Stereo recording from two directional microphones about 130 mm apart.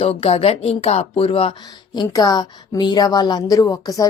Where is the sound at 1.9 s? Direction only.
30° left (ahead or behind).